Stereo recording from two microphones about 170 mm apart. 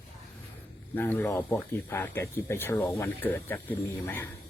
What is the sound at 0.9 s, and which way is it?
Speech, 10° left (ahead or behind).